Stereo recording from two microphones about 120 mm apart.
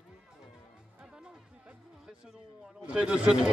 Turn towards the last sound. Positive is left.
turn(degrees=-10)  # may be behind; listen again after turning